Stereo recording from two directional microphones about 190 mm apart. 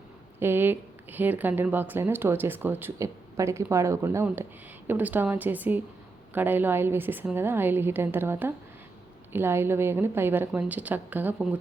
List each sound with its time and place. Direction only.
0.3 s speech: 10° right (ahead or behind)